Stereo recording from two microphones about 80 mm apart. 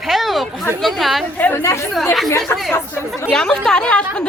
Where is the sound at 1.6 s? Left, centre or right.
Left.